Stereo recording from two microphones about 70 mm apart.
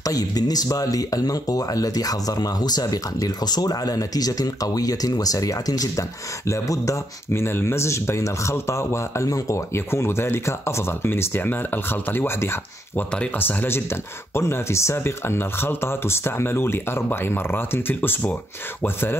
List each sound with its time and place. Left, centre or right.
0.0 s speech: left
6.4 s speech: left
9.8 s speech: left